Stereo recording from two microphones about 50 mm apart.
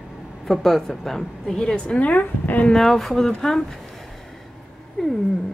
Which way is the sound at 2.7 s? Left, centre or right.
Centre.